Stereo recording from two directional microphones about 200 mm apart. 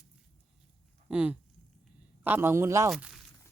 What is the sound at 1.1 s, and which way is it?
Speech, 5° right (ahead or behind).